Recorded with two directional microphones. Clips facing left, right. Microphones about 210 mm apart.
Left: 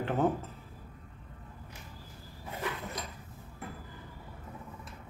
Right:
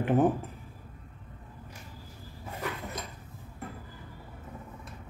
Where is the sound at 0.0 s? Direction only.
15° right (ahead or behind).